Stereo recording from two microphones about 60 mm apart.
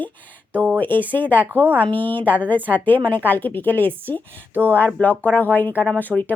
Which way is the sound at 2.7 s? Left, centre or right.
Left.